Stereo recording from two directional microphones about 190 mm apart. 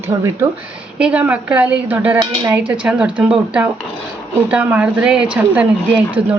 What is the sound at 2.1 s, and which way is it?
Speech, 20° right (ahead or behind).